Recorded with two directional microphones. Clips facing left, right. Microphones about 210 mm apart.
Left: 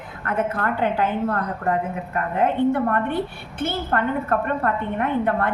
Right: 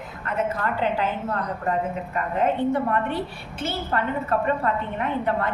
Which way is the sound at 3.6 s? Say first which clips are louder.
Left 3 dB; 55° left (ahead or behind).